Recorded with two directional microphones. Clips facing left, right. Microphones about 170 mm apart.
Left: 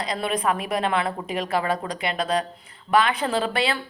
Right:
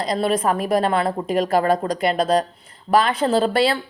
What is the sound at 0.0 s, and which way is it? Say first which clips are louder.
A woman's voice: right 5 dB; 40° right (ahead or behind).